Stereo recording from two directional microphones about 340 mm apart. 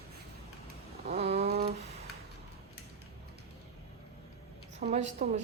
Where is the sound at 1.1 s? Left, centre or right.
Centre.